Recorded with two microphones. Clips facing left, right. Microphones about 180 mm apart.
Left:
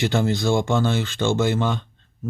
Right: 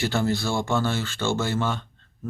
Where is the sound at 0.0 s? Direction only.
20° left (ahead or behind).